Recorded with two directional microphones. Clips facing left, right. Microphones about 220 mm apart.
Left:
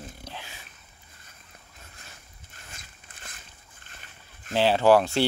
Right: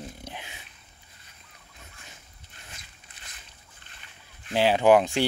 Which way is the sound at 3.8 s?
45° left (ahead or behind).